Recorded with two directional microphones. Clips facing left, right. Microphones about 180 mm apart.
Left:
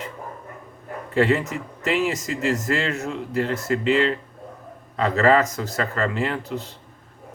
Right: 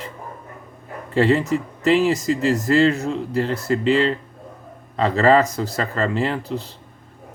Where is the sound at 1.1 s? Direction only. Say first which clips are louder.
Right 3 dB; 30° right (ahead or behind).